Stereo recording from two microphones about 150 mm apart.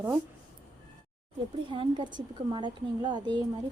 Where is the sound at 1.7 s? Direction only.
30° right (ahead or behind).